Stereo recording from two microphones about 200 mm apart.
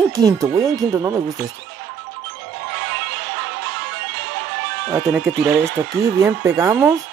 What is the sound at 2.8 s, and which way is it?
Music, 60° right (ahead or behind).